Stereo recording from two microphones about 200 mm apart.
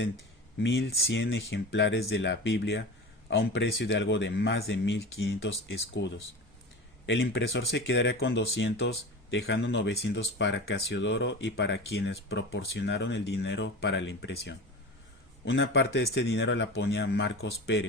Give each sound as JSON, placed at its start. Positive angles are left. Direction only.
{"t": 0.6, "sound": "speech", "side_deg": 65}